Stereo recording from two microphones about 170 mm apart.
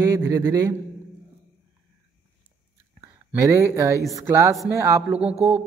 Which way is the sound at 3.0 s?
20° right (ahead or behind).